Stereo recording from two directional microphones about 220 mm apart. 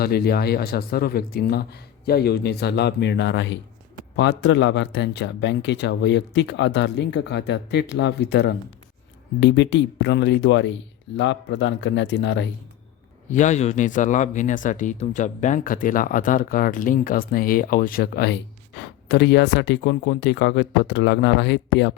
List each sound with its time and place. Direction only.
0.0 s speech: 45° left (ahead or behind)
13.3 s speech: 35° left (ahead or behind); by 21.9 s 55° left (ahead or behind)